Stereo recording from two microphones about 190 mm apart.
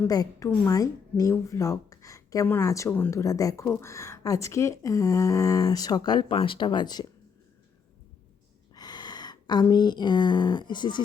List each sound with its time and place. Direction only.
0.1 s a woman's voice: 15° left (ahead or behind)
8.7 s speech: 20° left (ahead or behind)